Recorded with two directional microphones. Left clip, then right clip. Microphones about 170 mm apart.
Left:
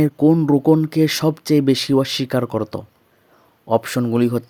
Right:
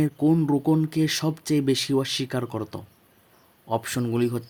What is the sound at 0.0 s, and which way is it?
Speech, 30° left (ahead or behind).